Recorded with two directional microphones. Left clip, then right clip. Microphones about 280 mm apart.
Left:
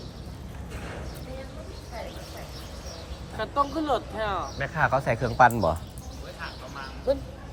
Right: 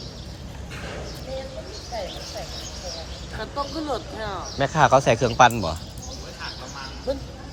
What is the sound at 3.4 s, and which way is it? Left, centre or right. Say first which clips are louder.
Speech: left 3 dB; left.